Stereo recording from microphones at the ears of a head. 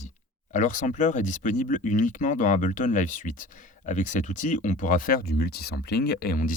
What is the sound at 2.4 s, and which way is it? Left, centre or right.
Speech, left.